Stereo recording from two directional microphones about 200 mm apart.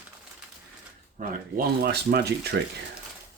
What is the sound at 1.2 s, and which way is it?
Speech, 45° right (ahead or behind).